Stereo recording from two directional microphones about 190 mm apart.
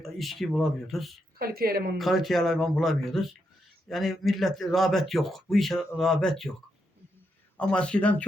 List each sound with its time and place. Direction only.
0.0 s speech: centre (ahead or behind)
1.4 s speech: 50° right (ahead or behind)
2.0 s speech: centre (ahead or behind)
7.5 s speech: 5° left (ahead or behind)